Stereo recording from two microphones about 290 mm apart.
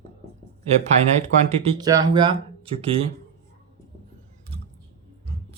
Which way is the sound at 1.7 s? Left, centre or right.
Centre.